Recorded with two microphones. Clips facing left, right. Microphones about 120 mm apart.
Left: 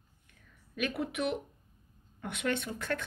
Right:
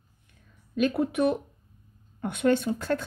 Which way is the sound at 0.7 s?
35° right (ahead or behind).